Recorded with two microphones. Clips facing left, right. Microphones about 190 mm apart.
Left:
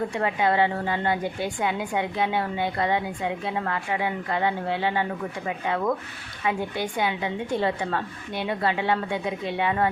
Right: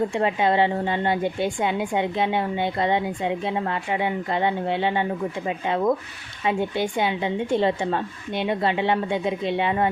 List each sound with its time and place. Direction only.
0.1 s a woman's voice: 25° right (ahead or behind)